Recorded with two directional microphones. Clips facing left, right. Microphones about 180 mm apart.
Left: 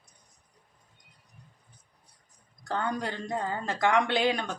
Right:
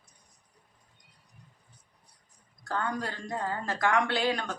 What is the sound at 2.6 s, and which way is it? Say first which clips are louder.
Speech: left 2 dB; 20° left (ahead or behind).